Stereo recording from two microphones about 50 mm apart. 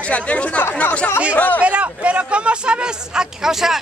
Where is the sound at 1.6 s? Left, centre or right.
Right.